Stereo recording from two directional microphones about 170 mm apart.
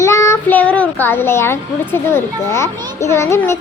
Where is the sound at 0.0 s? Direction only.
15° left (ahead or behind).